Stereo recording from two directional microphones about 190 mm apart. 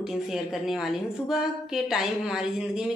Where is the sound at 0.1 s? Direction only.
Centre (ahead or behind).